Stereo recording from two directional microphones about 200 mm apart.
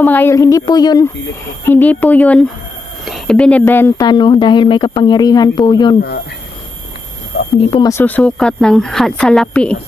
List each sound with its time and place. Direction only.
0.0 s a woman's voice: 10° left (ahead or behind)
1.6 s a woman's voice: 10° left (ahead or behind)
4.1 s speech: 20° left (ahead or behind)
7.3 s a sound: 55° left (ahead or behind)
7.9 s speech: 10° left (ahead or behind)